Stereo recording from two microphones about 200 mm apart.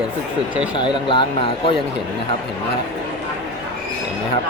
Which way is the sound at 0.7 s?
25° left (ahead or behind).